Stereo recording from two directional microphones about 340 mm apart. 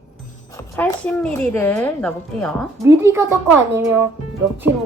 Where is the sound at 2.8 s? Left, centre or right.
Centre.